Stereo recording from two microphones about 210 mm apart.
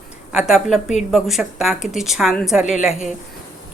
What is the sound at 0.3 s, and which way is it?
A woman's voice, centre (ahead or behind).